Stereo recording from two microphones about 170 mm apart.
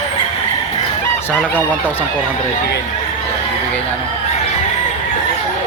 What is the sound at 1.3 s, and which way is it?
Speech, 10° left (ahead or behind).